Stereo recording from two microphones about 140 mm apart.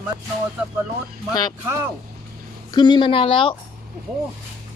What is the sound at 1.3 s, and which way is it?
Speech, 30° left (ahead or behind).